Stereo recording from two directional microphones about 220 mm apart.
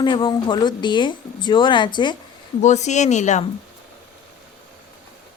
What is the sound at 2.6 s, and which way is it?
Speech, 30° left (ahead or behind).